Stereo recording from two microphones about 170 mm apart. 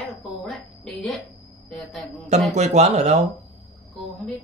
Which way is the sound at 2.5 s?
40° right (ahead or behind).